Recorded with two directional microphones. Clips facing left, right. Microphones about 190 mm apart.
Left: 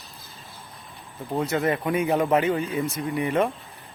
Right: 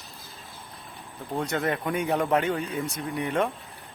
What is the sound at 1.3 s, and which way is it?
Speech, centre (ahead or behind).